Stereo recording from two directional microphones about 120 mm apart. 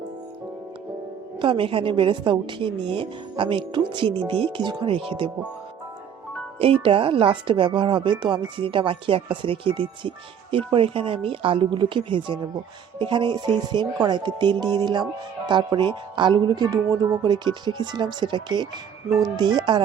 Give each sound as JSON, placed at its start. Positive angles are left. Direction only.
{"t": 1.4, "sound": "speech", "side_deg": -45}
{"t": 6.6, "sound": "speech", "side_deg": -50}